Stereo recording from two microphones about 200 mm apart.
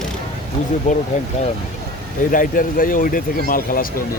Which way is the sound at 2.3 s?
45° left (ahead or behind).